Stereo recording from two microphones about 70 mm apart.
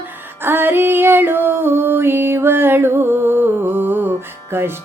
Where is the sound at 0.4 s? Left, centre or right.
Right.